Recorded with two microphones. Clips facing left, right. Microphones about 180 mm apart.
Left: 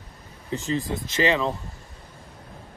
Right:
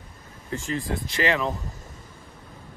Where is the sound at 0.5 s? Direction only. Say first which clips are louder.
Left 2 dB; 20° left (ahead or behind).